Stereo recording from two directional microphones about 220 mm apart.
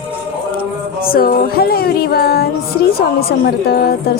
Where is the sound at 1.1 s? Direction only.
45° left (ahead or behind).